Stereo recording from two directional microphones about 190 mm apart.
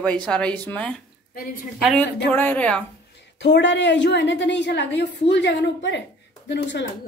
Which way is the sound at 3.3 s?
65° left (ahead or behind).